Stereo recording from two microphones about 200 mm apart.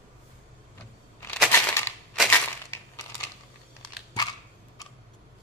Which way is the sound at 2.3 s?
10° left (ahead or behind).